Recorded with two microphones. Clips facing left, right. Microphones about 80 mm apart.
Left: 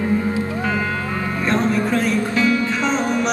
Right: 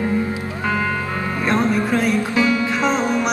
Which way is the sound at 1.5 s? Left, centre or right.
Centre.